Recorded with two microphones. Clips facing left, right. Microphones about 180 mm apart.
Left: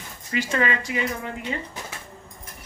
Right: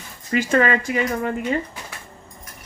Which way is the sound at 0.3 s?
50° right (ahead or behind).